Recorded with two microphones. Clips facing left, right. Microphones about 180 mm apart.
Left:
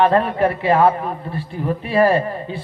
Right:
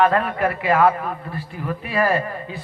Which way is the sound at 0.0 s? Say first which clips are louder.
Left 3 dB; 30° left (ahead or behind).